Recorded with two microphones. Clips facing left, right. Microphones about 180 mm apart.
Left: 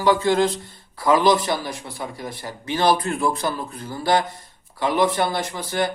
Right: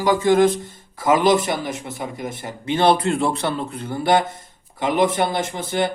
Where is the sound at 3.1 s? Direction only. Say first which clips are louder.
Right 2 dB; 70° right (ahead or behind).